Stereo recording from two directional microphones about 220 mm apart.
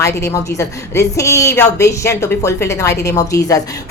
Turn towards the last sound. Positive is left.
turn(degrees=15)  # may be behind; listen again after turning